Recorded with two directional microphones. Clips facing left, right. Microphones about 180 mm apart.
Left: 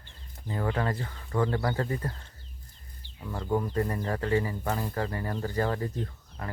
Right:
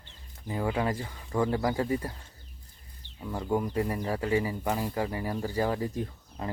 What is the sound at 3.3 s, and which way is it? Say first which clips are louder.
Speech: even; 10° right (ahead or behind).